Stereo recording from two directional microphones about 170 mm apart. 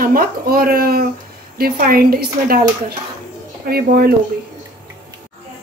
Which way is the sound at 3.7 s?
65° right (ahead or behind).